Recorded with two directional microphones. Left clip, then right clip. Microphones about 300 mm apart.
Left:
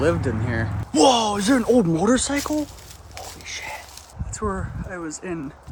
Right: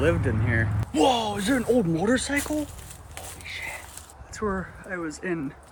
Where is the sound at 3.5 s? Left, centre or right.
Left.